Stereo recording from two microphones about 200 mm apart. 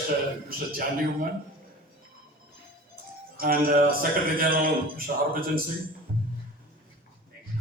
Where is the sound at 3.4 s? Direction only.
45° right (ahead or behind).